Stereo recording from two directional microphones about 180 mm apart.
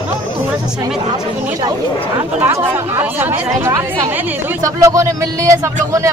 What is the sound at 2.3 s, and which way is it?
Speech, 10° right (ahead or behind).